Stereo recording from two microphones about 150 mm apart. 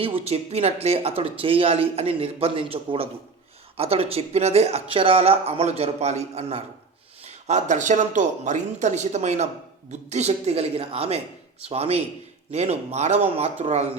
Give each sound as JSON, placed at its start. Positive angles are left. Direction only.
{"t": 0.0, "sound": "speech", "side_deg": -40}